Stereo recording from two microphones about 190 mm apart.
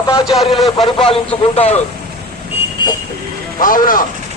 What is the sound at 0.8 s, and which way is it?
Speech, 30° left (ahead or behind).